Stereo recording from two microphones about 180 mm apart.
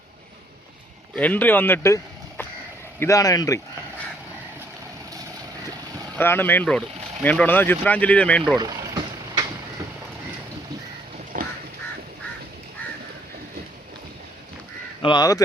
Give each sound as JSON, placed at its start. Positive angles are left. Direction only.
{"t": 1.1, "sound": "speech", "side_deg": 10}
{"t": 3.0, "sound": "speech", "side_deg": 20}
{"t": 6.1, "sound": "speech", "side_deg": 10}
{"t": 11.3, "sound": "duck", "side_deg": -50}
{"t": 15.0, "sound": "speech", "side_deg": 25}